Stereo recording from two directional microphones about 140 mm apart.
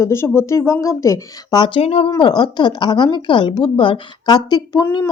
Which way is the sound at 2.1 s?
30° left (ahead or behind).